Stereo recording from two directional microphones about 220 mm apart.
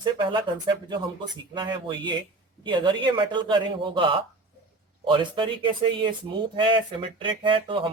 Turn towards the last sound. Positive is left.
turn(degrees=-20)  # may be behind; listen again after turning